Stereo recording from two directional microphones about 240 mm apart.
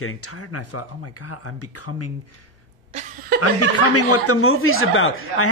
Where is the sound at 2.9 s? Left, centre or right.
Right.